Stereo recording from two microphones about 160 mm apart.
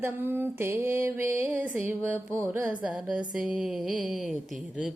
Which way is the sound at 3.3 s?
Centre (ahead or behind).